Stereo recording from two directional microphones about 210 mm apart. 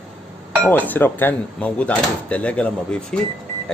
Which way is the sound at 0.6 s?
10° left (ahead or behind).